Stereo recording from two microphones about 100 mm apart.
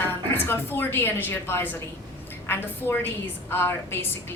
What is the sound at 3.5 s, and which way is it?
Speech, 20° left (ahead or behind).